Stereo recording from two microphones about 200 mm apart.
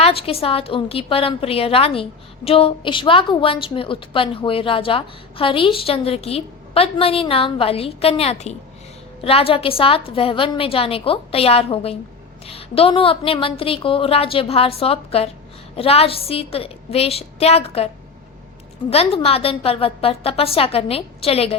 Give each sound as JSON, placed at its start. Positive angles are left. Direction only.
{"t": 0.0, "sound": "a woman's voice", "side_deg": 30}
{"t": 18.9, "sound": "a woman's voice", "side_deg": 30}